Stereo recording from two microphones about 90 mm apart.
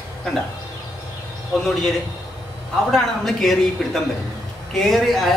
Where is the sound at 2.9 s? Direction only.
5° left (ahead or behind).